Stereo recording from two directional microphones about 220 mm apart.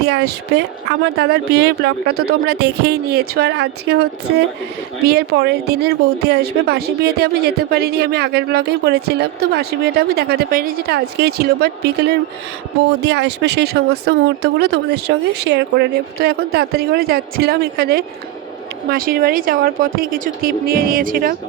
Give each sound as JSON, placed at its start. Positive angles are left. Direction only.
{"t": 0.0, "sound": "a woman's voice", "side_deg": -50}